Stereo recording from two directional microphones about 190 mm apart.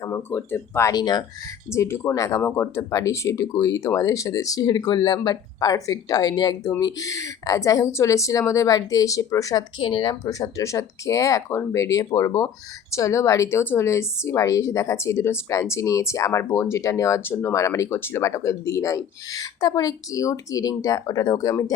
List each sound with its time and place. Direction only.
0.0 s speech: 15° left (ahead or behind)